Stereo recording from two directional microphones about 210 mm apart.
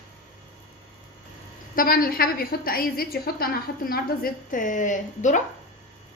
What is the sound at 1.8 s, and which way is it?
A woman's voice, 45° left (ahead or behind).